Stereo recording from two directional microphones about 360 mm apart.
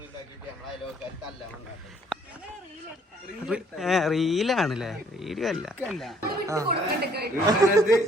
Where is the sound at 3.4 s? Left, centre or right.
Centre.